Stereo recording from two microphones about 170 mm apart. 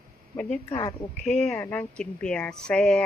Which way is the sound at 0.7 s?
20° left (ahead or behind).